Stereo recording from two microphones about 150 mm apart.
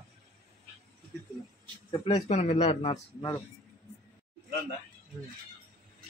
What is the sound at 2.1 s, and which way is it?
Speech, 45° left (ahead or behind).